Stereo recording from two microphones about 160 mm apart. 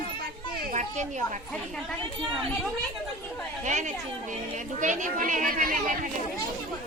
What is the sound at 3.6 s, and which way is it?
Speech, 50° right (ahead or behind).